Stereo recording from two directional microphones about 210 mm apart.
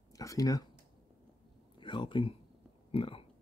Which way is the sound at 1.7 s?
25° left (ahead or behind).